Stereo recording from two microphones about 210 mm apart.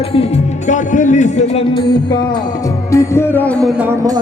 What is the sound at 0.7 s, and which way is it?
A man's voice, 35° left (ahead or behind).